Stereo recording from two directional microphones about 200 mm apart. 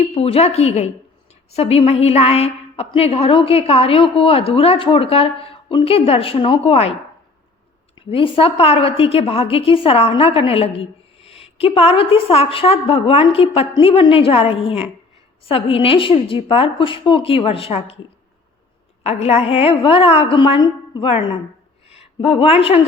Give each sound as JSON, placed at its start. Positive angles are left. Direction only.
{"t": 0.0, "sound": "a woman's voice", "side_deg": 30}
{"t": 7.9, "sound": "a woman's voice", "side_deg": 25}
{"t": 19.0, "sound": "a woman's voice", "side_deg": 30}